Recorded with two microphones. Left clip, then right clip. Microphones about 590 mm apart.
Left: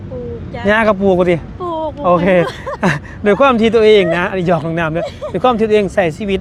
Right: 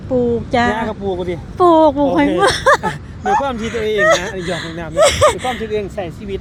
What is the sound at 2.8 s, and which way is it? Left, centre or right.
Speech, left.